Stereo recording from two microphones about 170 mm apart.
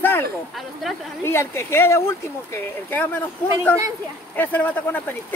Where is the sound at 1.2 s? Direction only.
15° left (ahead or behind).